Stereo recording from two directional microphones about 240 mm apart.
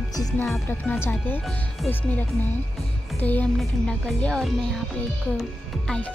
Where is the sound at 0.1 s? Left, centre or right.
Centre.